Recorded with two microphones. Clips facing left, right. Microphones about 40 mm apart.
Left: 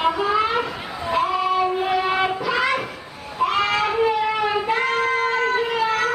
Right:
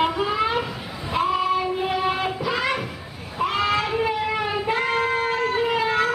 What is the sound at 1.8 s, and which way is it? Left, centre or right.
Music, centre.